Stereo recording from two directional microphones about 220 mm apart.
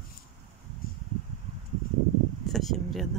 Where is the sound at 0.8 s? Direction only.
40° left (ahead or behind).